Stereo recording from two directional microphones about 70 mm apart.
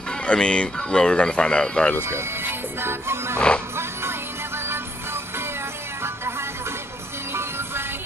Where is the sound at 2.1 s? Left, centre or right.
Right.